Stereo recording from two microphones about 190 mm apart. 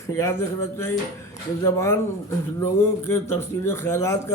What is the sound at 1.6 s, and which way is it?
Speech, 15° left (ahead or behind).